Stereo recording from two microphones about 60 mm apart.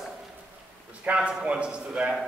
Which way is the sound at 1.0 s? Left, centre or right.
Centre.